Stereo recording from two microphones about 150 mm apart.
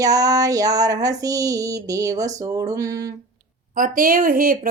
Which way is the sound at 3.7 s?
65° right (ahead or behind).